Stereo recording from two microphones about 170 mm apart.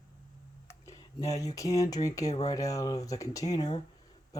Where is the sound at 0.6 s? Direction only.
20° left (ahead or behind).